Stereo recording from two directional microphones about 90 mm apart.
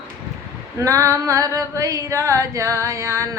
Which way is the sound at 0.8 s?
35° right (ahead or behind).